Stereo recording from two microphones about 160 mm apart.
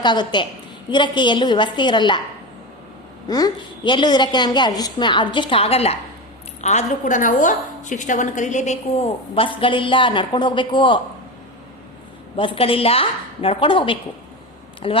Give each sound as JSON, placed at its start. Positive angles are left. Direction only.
{"t": 0.0, "sound": "a woman's voice", "side_deg": 30}
{"t": 3.2, "sound": "a woman's voice", "side_deg": 25}
{"t": 12.4, "sound": "a woman's voice", "side_deg": 35}